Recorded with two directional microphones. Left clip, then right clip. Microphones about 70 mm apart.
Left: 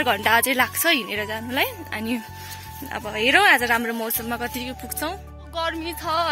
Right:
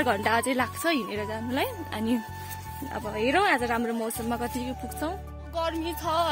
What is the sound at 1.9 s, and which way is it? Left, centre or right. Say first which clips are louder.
Speech: left 2 dB; right.